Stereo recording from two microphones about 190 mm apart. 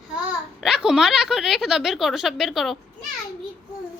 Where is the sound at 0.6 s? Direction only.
5° right (ahead or behind).